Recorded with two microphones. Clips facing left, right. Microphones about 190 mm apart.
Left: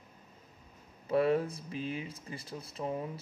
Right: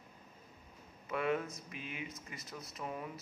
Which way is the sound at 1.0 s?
35° left (ahead or behind).